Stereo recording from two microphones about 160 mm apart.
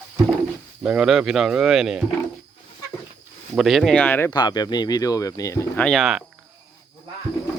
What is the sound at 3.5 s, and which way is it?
Speech, centre (ahead or behind).